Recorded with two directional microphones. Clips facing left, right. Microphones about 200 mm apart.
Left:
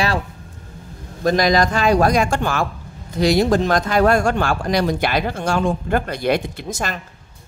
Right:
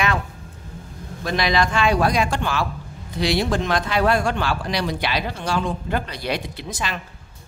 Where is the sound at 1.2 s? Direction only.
40° left (ahead or behind).